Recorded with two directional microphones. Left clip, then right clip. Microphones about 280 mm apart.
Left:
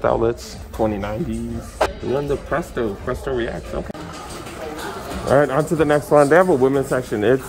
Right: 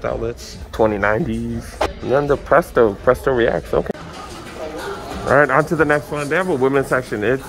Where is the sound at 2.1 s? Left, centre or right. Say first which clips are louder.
Right 10 dB; centre.